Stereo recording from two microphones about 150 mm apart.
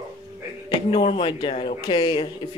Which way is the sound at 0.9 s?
35° left (ahead or behind).